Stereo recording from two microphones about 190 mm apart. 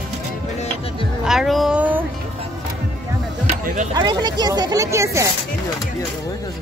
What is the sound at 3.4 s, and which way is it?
Music, 40° right (ahead or behind).